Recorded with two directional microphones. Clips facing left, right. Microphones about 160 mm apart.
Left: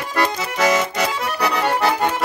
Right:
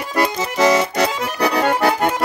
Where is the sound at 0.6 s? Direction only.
35° right (ahead or behind).